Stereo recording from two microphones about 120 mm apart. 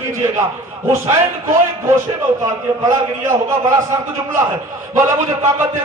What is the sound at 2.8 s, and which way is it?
Speech, 25° right (ahead or behind).